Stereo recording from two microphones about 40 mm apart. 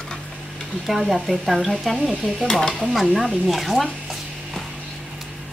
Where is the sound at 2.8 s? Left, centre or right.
Centre.